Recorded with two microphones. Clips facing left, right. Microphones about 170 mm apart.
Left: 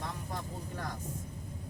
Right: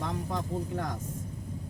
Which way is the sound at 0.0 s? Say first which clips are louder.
Right 6 dB; 75° right (ahead or behind).